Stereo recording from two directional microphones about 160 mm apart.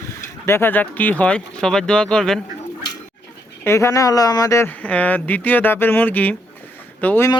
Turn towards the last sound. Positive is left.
turn(degrees=10)  # may be behind; listen again after turning